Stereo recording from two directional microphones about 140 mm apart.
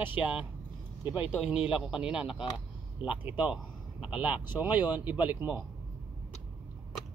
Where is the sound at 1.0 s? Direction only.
10° right (ahead or behind).